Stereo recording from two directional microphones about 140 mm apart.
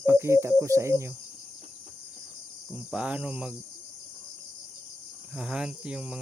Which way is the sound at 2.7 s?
10° right (ahead or behind).